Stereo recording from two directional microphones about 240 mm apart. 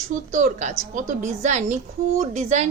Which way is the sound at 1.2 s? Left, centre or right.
Right.